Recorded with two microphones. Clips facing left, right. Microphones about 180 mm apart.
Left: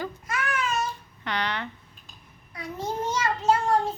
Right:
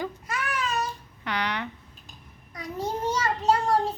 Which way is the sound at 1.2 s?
10° right (ahead or behind).